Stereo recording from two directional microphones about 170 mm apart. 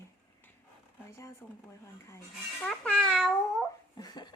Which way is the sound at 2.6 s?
5° left (ahead or behind).